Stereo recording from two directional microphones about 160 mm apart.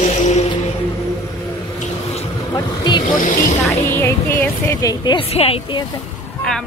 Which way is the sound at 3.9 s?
15° left (ahead or behind).